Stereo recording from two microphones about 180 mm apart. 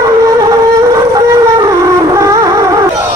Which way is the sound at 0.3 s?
20° right (ahead or behind).